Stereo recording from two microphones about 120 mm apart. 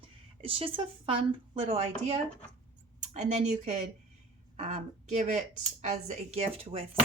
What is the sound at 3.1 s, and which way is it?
A woman's voice, 75° right (ahead or behind).